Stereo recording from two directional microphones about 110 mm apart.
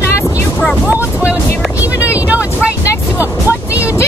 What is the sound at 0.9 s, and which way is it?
Vehicle, 15° right (ahead or behind).